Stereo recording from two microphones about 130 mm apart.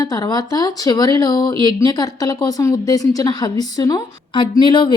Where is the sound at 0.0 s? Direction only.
25° left (ahead or behind).